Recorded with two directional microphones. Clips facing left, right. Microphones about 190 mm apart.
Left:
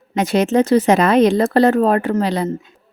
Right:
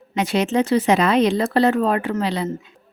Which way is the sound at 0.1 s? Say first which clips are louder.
Left 4 dB; 45° left (ahead or behind).